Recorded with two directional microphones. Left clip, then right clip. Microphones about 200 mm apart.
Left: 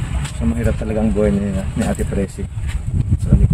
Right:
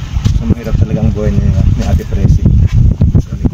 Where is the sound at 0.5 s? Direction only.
Centre (ahead or behind).